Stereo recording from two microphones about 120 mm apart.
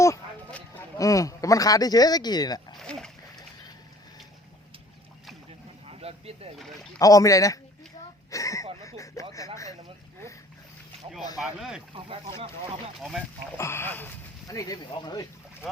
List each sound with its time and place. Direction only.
0.9 s speech: 25° left (ahead or behind)
2.7 s splash: 5° left (ahead or behind)
5.5 s a sound: 55° right (ahead or behind)
6.6 s speech: centre (ahead or behind)
7.0 s speech: 30° left (ahead or behind)
8.3 s a sound: 25° left (ahead or behind)
11.3 s speech: 5° right (ahead or behind)
11.9 s speech: 50° right (ahead or behind)
13.0 s speech: centre (ahead or behind)
13.6 s speech: 20° left (ahead or behind)
14.4 s speech: 30° left (ahead or behind)